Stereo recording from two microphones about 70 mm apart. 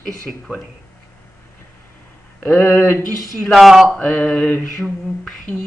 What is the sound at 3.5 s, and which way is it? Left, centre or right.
Speech, centre.